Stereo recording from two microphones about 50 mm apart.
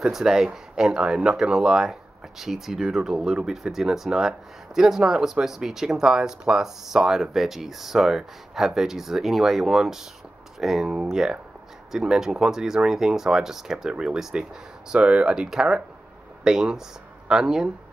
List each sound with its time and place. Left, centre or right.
0.0 s speech: centre